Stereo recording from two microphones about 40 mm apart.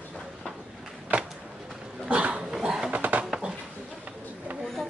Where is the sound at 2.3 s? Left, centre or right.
Centre.